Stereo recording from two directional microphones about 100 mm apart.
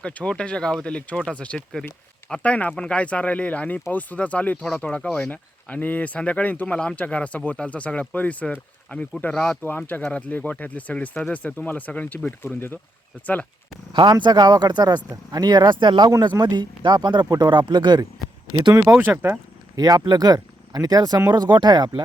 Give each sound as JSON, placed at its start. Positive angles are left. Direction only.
{"t": 0.0, "sound": "speech", "side_deg": 10}
{"t": 13.9, "sound": "speech", "side_deg": -50}
{"t": 18.7, "sound": "speech", "side_deg": -35}
{"t": 18.9, "sound": "speech", "side_deg": -20}
{"t": 19.7, "sound": "speech", "side_deg": -40}